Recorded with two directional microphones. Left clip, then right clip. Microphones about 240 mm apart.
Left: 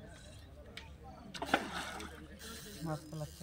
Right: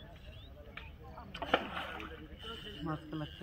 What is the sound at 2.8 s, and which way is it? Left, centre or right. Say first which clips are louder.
Speech: right 1 dB; left.